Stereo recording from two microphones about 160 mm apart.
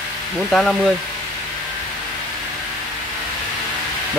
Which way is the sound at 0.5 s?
Centre (ahead or behind).